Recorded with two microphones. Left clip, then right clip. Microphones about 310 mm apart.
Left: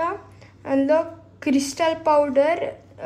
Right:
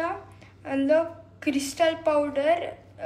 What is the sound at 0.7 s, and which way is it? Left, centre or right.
A woman's voice, left.